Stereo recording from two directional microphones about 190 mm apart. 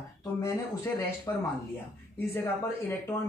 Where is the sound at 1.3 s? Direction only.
15° left (ahead or behind).